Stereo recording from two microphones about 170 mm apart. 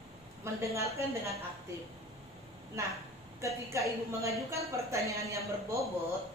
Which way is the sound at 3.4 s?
20° right (ahead or behind).